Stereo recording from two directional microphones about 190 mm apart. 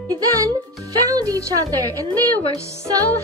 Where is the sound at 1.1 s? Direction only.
20° right (ahead or behind).